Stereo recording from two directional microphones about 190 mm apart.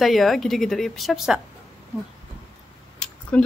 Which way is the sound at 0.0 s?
Centre (ahead or behind).